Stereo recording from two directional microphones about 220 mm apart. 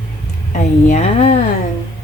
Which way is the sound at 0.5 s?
30° left (ahead or behind).